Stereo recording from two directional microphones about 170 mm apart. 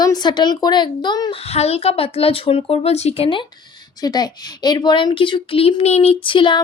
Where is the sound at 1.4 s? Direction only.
35° left (ahead or behind).